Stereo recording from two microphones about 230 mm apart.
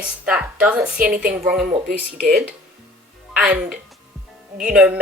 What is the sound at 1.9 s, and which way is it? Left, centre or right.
Speech, right.